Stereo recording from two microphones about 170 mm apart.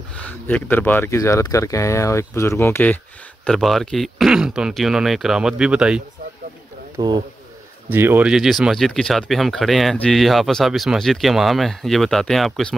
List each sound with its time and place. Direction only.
0.1 s speech: 10° left (ahead or behind)
7.0 s speech: 25° right (ahead or behind)
7.9 s speech: 10° right (ahead or behind)